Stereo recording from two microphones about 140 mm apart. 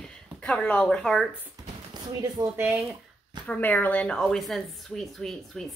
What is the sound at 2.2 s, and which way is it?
Speech, 15° right (ahead or behind).